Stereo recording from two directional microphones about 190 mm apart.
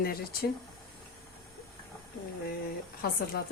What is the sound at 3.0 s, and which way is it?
Speech, 50° left (ahead or behind).